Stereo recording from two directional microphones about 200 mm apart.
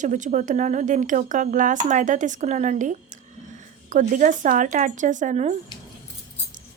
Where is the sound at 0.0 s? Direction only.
40° right (ahead or behind).